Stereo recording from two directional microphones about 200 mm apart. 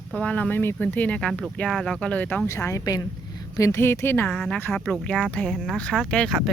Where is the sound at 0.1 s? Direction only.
5° left (ahead or behind).